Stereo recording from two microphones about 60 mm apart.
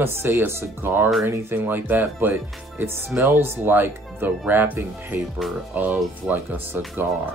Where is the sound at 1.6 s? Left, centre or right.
Right.